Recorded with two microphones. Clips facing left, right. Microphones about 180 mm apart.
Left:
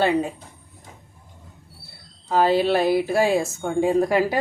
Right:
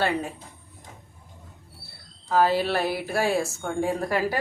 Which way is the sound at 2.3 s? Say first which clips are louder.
Left 3 dB; 20° left (ahead or behind).